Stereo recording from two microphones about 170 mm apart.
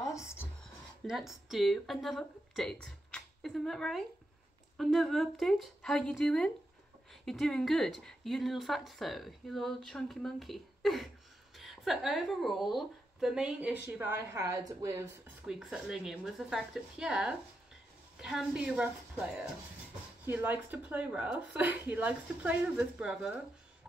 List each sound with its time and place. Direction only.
0.0 s a sound: 15° left (ahead or behind)
1.0 s speech: centre (ahead or behind); by 15.0 s 20° right (ahead or behind)
15.4 s a woman's voice: 5° right (ahead or behind)